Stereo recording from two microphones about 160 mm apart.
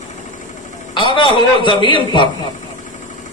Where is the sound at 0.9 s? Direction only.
30° left (ahead or behind).